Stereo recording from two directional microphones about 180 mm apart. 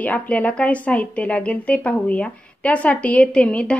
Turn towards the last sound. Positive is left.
turn(degrees=5)  # may be behind; listen again after turning